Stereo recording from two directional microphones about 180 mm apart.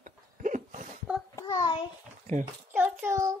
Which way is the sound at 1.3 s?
20° left (ahead or behind).